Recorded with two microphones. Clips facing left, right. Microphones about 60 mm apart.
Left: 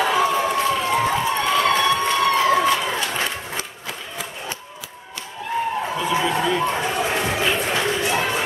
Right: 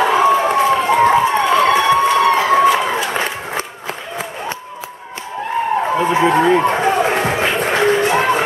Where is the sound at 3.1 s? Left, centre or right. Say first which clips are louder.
Right 5 dB; right.